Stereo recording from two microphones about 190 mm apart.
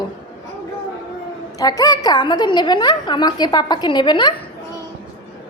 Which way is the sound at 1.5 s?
20° left (ahead or behind).